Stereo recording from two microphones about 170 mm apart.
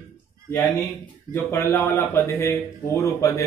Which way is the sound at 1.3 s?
15° left (ahead or behind).